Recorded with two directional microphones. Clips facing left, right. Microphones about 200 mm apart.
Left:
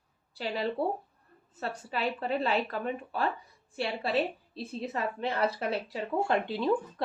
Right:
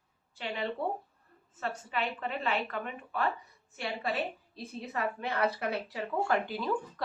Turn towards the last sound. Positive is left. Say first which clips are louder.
# left 3 dB
turn(degrees=25)  # may be behind; listen again after turning